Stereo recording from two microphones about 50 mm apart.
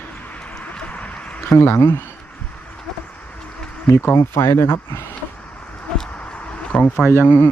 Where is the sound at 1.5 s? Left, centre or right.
Left.